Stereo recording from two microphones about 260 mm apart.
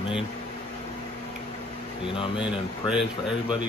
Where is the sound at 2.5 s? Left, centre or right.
Centre.